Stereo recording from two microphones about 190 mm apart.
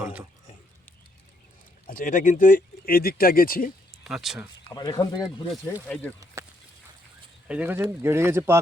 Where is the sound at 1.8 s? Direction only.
45° left (ahead or behind).